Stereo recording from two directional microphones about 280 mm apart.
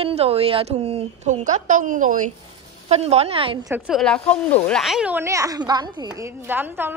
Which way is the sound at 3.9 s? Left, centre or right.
Centre.